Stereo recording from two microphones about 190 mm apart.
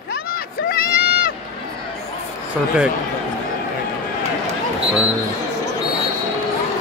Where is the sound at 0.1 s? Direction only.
50° left (ahead or behind).